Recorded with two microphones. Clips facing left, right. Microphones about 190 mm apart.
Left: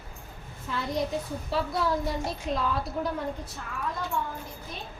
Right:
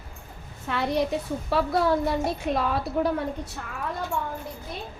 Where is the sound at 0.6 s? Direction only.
70° right (ahead or behind).